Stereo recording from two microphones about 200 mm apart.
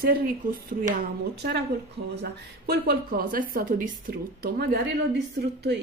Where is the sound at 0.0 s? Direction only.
45° right (ahead or behind).